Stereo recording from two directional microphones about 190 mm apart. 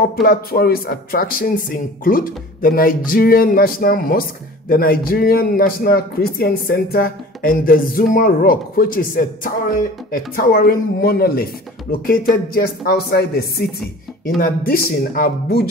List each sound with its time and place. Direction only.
0.1 s speech: 50° left (ahead or behind)